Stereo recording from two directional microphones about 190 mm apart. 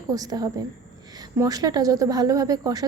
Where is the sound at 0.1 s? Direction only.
20° right (ahead or behind).